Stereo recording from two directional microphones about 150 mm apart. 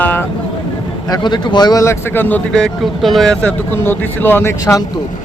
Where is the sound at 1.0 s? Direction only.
30° left (ahead or behind).